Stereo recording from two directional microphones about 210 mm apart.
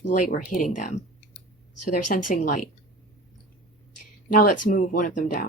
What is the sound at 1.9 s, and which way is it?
Speech, 35° left (ahead or behind).